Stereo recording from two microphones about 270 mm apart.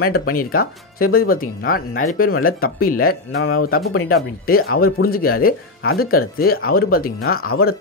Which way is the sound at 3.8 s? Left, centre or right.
Left.